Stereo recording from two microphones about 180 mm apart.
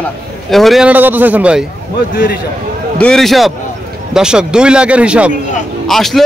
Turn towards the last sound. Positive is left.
turn(degrees=0)  # may be behind; listen again after turning